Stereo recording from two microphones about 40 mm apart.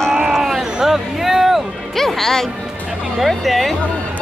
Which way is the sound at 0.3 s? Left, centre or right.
Centre.